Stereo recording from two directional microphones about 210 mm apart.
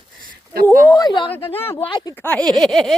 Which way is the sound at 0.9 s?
15° left (ahead or behind).